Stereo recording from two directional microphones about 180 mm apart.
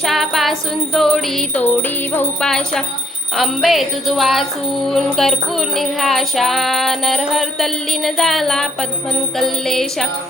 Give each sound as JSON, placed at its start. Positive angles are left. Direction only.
{"t": 0.0, "sound": "music", "side_deg": 0}